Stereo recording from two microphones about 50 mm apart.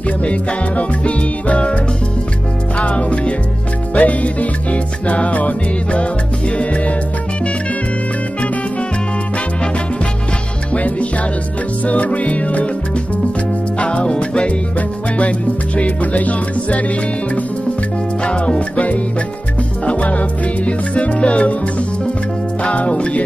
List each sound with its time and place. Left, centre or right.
0.2 s music: left
2.8 s music: left
10.7 s music: left
13.7 s music: left
18.2 s music: centre